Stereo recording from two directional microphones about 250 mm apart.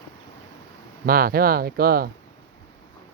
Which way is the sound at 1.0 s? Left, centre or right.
Right.